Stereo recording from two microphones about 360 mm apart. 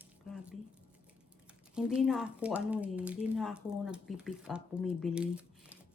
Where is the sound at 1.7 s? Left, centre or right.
Centre.